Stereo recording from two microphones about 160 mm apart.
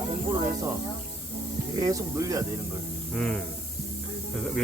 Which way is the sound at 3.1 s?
5° left (ahead or behind).